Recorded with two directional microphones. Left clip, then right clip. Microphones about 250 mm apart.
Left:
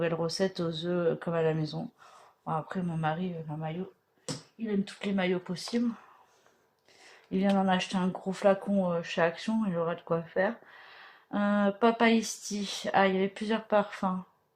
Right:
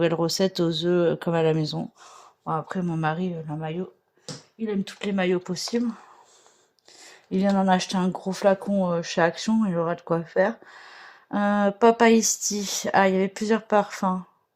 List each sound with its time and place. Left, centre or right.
0.0 s speech: right
7.3 s speech: right